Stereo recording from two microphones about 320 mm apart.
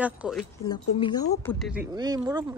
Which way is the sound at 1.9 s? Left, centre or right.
Centre.